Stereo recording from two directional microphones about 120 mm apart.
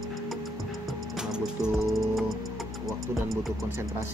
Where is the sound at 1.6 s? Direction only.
Centre (ahead or behind).